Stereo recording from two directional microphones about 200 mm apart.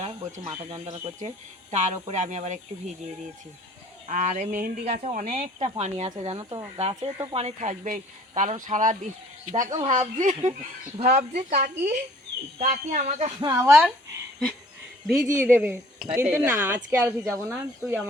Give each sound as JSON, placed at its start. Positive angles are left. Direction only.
{"t": 0.0, "sound": "speech", "side_deg": -35}
{"t": 4.1, "sound": "a woman's voice", "side_deg": -40}
{"t": 4.9, "sound": "a woman's voice", "side_deg": -30}
{"t": 13.4, "sound": "speech", "side_deg": -15}
{"t": 15.0, "sound": "speech", "side_deg": -5}